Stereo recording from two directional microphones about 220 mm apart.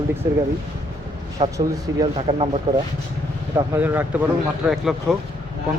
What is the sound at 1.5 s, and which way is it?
Speech, 15° right (ahead or behind).